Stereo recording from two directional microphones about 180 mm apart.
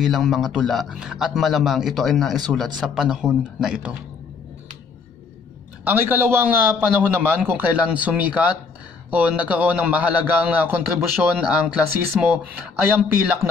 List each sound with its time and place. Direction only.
0.0 s a man's voice: centre (ahead or behind)
5.9 s a man's voice: 10° right (ahead or behind)